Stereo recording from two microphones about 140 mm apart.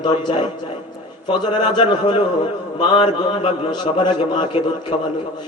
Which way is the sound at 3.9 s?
30° left (ahead or behind).